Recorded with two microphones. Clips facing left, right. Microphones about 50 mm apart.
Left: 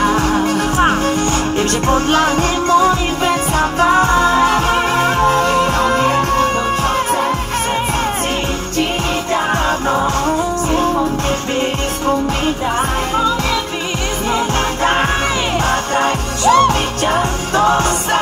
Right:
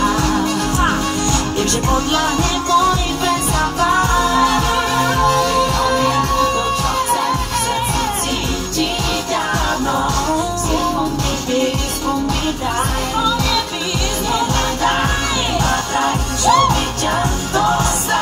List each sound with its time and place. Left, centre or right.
0.0 s music: left
9.8 s music: left
14.8 s music: left